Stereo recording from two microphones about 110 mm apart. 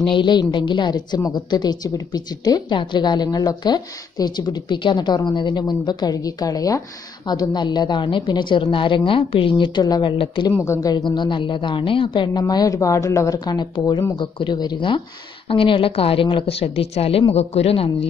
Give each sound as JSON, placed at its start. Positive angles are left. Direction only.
{"t": 0.0, "sound": "a woman's voice", "side_deg": 45}
{"t": 10.1, "sound": "a woman's voice", "side_deg": 50}
{"t": 10.6, "sound": "a woman's voice", "side_deg": 30}